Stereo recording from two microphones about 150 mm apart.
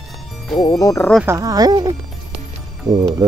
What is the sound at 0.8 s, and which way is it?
Speech, 20° left (ahead or behind).